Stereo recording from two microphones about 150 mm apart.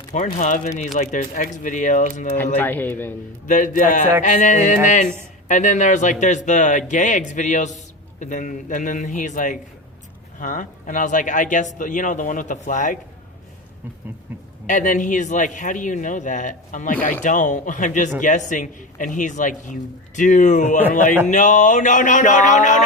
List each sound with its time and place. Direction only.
0.3 s speech: 55° left (ahead or behind)
2.6 s a man's voice: 15° left (ahead or behind)
3.4 s speech: 60° left (ahead or behind)
4.2 s music: 55° left (ahead or behind)
5.5 s speech: 55° left (ahead or behind)
14.7 s speech: 60° left (ahead or behind)